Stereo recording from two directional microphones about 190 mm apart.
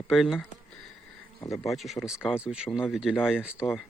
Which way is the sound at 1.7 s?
Centre (ahead or behind).